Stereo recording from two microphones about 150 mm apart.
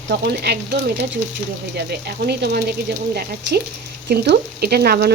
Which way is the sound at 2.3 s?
90° right.